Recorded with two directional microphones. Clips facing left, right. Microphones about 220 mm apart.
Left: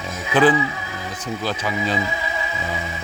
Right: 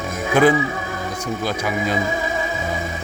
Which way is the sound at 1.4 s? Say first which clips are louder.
Right 1 dB; 10° right (ahead or behind).